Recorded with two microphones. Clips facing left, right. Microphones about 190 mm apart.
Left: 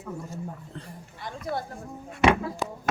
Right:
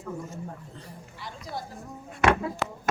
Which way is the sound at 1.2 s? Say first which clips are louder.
Left 6 dB; 55° left (ahead or behind).